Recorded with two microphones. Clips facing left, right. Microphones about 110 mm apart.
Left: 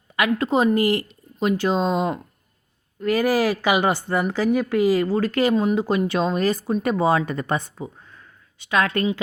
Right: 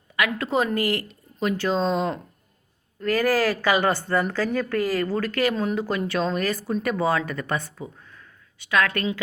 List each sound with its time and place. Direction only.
0.2 s a woman's voice: 20° left (ahead or behind)